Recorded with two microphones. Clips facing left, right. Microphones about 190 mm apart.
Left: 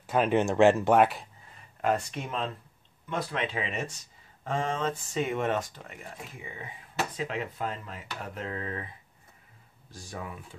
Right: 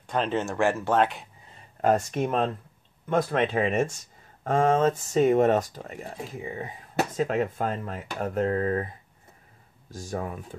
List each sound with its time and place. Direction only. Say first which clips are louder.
0.0 s speech: left 2 dB; 10° left (ahead or behind)
1.8 s speech: right 6 dB; 45° right (ahead or behind)